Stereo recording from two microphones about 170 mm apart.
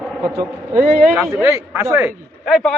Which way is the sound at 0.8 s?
60° right (ahead or behind).